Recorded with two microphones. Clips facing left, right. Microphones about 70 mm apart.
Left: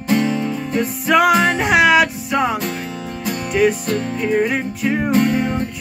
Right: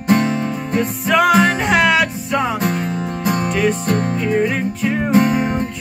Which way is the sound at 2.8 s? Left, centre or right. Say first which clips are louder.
Right 5 dB; right.